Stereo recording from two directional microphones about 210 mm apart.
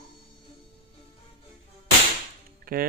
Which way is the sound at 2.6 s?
45° right (ahead or behind).